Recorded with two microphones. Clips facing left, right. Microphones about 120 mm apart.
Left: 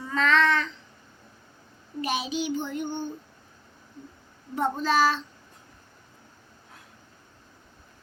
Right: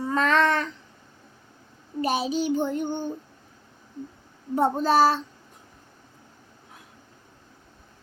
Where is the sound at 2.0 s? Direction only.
40° right (ahead or behind).